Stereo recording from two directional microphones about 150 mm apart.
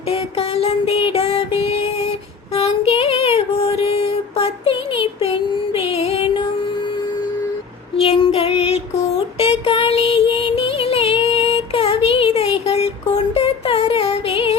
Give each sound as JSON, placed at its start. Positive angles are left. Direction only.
{"t": 0.1, "sound": "music", "side_deg": 40}
{"t": 2.5, "sound": "child singing", "side_deg": 40}
{"t": 7.9, "sound": "child singing", "side_deg": 35}
{"t": 9.4, "sound": "music", "side_deg": 35}